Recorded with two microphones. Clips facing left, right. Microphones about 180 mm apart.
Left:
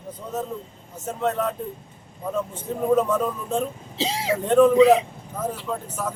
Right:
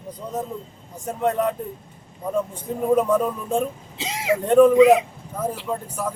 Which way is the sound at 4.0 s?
30° left (ahead or behind).